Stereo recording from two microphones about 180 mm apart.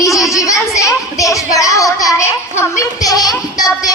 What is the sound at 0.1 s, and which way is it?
Children playing, centre (ahead or behind).